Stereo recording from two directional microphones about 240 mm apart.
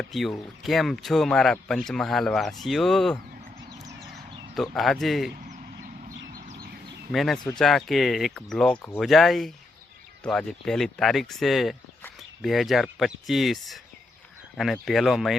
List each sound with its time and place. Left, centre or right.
0.0 s speech: centre
4.5 s speech: centre
5.5 s vehicle: right
7.1 s speech: centre